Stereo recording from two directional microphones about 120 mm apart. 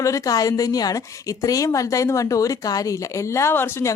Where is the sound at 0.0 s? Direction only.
30° left (ahead or behind).